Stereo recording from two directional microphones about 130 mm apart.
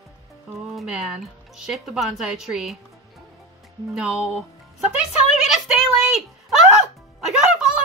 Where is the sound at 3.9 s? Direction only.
5° right (ahead or behind).